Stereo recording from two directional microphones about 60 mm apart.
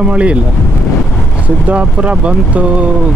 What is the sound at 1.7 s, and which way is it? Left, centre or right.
Speech, right.